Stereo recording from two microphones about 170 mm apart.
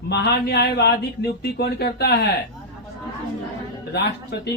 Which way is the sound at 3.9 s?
75° left (ahead or behind).